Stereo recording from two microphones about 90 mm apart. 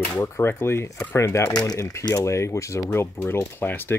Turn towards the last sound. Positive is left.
turn(degrees=25)  # may be behind; listen again after turning